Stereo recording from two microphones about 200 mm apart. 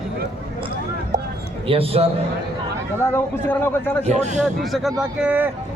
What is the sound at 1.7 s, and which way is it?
Speech, 30° right (ahead or behind).